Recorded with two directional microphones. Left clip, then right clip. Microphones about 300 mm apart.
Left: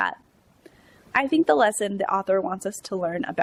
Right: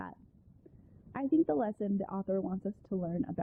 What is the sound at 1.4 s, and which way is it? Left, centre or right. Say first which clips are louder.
Speech: left 13 dB; centre.